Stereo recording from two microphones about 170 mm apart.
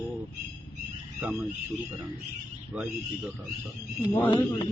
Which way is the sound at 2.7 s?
5° right (ahead or behind).